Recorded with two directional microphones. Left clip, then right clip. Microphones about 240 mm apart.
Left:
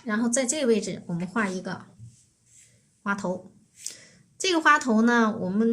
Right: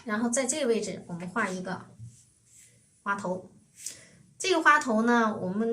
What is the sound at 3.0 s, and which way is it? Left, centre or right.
A woman's voice, left.